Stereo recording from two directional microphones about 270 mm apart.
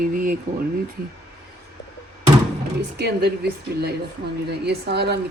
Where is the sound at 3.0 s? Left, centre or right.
Right.